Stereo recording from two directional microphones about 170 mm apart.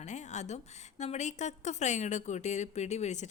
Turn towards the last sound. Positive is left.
turn(degrees=45)  # may be behind; listen again after turning